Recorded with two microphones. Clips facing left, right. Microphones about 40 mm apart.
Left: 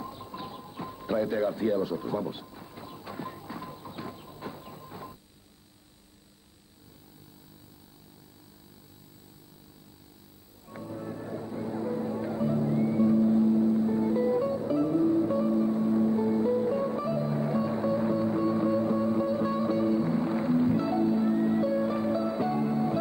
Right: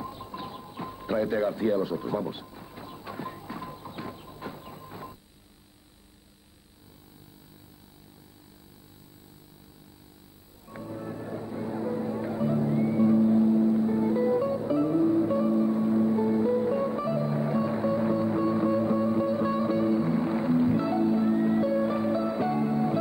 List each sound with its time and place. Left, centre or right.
0.0 s music: centre
10.7 s music: centre